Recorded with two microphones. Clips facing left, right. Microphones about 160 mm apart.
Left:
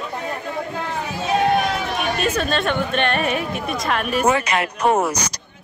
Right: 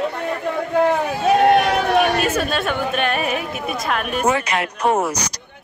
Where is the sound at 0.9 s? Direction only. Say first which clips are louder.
Right 5 dB; 65° right (ahead or behind).